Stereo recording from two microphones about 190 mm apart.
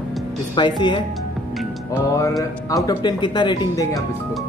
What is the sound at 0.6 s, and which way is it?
Speech, 25° left (ahead or behind).